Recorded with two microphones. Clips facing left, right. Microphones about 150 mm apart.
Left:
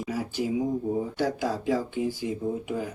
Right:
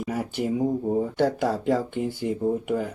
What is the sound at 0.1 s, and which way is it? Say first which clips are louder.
Speech: right 2 dB; 60° right (ahead or behind).